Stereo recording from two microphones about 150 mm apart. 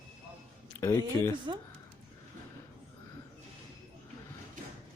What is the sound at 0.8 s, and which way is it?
Speech, 15° left (ahead or behind).